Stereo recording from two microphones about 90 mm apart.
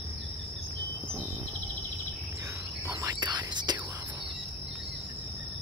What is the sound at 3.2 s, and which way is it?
Whispering, 55° right (ahead or behind).